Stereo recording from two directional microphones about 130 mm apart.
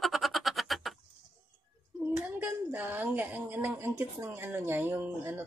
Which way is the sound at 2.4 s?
15° right (ahead or behind).